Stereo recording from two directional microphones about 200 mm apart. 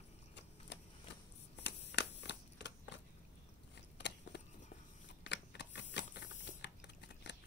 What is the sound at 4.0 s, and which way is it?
Biting, 60° left (ahead or behind).